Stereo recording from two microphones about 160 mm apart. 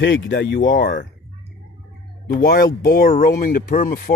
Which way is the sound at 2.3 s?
65° left (ahead or behind).